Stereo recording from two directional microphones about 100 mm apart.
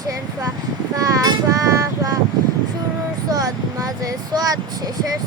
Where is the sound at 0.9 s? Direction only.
35° right (ahead or behind).